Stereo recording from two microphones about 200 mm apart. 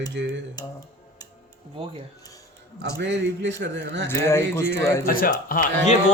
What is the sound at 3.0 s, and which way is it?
Speech, 65° right (ahead or behind).